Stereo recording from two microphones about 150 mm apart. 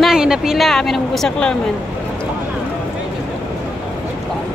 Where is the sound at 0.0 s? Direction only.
5° right (ahead or behind).